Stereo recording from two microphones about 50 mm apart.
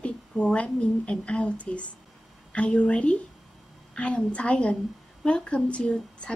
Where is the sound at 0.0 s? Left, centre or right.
Left.